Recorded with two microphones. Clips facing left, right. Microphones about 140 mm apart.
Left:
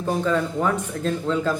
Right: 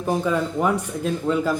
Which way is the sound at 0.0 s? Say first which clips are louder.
Even; 15° right (ahead or behind).